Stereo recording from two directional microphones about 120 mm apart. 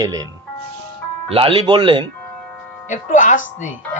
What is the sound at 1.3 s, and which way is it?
Speech, 50° right (ahead or behind).